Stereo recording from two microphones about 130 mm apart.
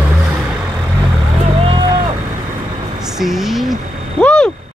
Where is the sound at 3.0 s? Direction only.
Centre (ahead or behind).